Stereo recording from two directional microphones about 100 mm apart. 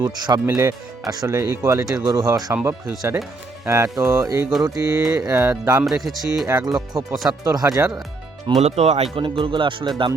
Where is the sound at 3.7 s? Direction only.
35° right (ahead or behind).